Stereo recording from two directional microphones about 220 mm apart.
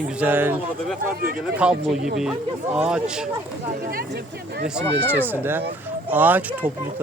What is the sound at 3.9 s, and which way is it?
Speech, 45° right (ahead or behind).